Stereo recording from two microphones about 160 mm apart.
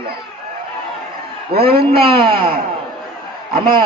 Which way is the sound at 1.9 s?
30° right (ahead or behind).